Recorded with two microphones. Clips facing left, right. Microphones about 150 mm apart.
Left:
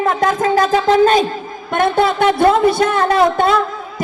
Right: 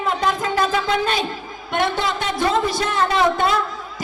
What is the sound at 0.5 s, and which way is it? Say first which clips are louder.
A man's voice: left 7 dB; 40° left (ahead or behind).